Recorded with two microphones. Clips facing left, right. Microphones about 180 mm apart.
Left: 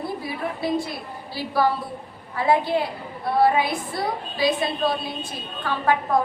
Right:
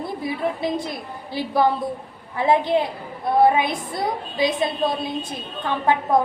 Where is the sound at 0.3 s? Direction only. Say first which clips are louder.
Right 3 dB; 20° right (ahead or behind).